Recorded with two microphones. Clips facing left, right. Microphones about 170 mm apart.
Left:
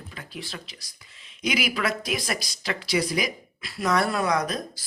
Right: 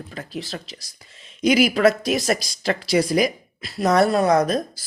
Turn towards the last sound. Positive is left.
turn(degrees=-50)  # may be behind; listen again after turning